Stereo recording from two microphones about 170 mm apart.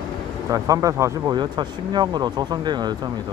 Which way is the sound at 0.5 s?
20° right (ahead or behind).